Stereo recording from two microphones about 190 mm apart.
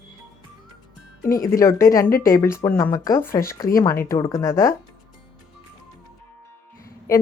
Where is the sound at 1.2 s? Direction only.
45° left (ahead or behind).